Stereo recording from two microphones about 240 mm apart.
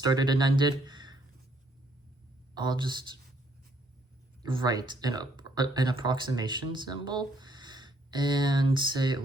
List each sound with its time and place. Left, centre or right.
0.0 s speech: centre
2.6 s speech: centre
4.4 s speech: centre